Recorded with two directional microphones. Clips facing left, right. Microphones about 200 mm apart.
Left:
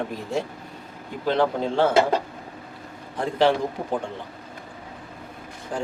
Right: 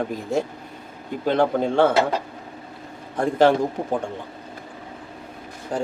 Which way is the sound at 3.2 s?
45° right (ahead or behind).